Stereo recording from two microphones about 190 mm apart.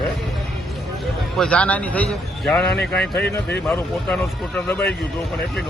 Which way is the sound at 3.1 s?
60° left (ahead or behind).